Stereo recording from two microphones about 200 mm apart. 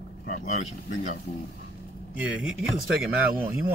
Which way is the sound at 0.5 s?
35° left (ahead or behind).